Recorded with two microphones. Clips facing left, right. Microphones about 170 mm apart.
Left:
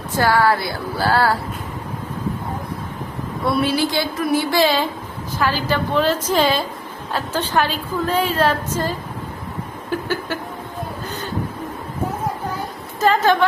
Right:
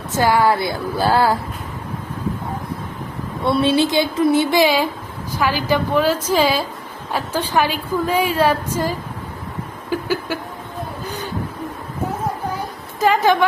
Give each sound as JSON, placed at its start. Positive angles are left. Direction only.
{"t": 0.2, "sound": "a woman's voice", "side_deg": -15}
{"t": 3.4, "sound": "a woman's voice", "side_deg": -25}
{"t": 13.0, "sound": "a woman's voice", "side_deg": -15}